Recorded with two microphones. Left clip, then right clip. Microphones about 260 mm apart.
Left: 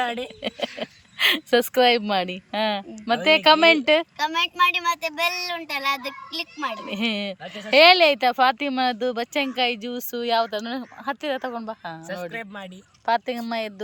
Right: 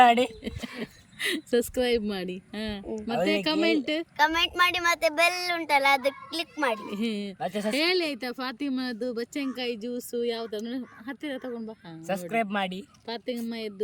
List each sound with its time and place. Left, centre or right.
0.0 s speech: right
1.2 s speech: centre
4.2 s a woman's voice: centre
6.9 s speech: centre
7.4 s speech: right
7.7 s speech: centre
12.0 s speech: right
13.1 s speech: centre